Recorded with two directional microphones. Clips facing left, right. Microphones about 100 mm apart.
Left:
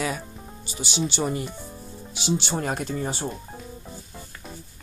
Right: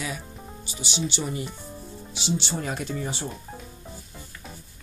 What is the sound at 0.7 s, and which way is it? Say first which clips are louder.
Speech: left 3 dB; 45° left (ahead or behind).